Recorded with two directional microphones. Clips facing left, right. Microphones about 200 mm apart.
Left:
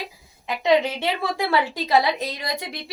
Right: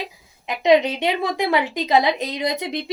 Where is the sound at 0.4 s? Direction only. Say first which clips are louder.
Right 3 dB; 20° right (ahead or behind).